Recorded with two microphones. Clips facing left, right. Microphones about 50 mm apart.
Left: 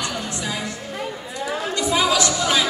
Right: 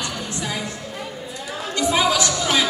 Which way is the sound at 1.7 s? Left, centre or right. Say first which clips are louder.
Right 1 dB; right.